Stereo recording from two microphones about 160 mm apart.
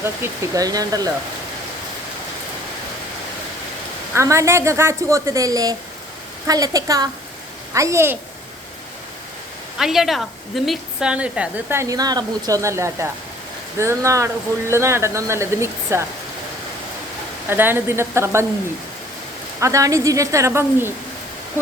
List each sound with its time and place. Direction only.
0.0 s speech: 20° right (ahead or behind)
4.1 s a woman's voice: 20° right (ahead or behind)
9.7 s a woman's voice: centre (ahead or behind)
17.5 s a woman's voice: 15° right (ahead or behind)
19.5 s speech: 20° right (ahead or behind)